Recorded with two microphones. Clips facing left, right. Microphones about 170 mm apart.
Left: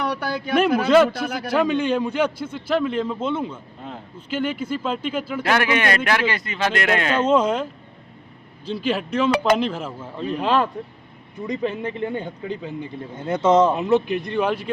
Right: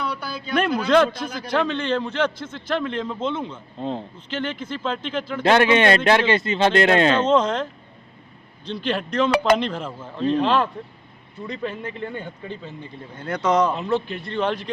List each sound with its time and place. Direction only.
0.0 s a sound: 80° left
0.9 s speech: 5° left (ahead or behind)
3.8 s speech: 30° right (ahead or behind)
4.3 s speech: 10° left (ahead or behind)
5.4 s speech: 25° right (ahead or behind)
7.2 s speech: 10° left (ahead or behind)
11.4 s speech: 15° left (ahead or behind)